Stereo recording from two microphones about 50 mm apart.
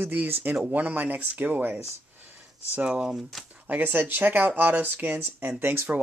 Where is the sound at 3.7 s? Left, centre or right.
Right.